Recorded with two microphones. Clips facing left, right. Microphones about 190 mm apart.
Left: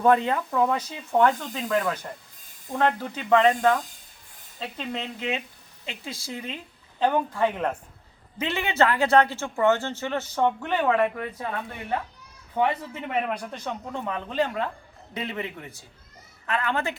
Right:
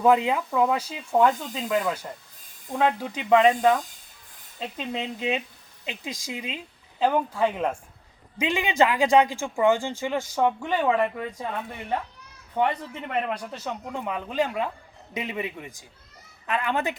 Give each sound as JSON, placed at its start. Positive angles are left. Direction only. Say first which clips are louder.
{"t": 0.0, "sound": "a man's voice", "louder": "right 1 dB", "side_deg": -10}
{"t": 12.5, "sound": "speech", "louder": "even", "side_deg": 10}
{"t": 13.5, "sound": "a man's voice", "louder": "even", "side_deg": -5}